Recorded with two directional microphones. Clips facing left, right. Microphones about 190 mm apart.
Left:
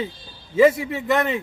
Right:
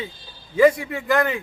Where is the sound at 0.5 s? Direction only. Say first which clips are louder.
Even; 25° left (ahead or behind).